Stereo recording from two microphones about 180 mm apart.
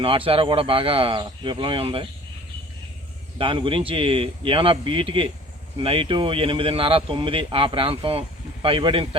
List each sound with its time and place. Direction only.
0.0 s speech: 30° right (ahead or behind)
3.3 s speech: 30° right (ahead or behind)